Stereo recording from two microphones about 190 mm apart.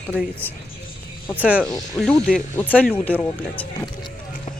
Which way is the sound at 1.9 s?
5° left (ahead or behind).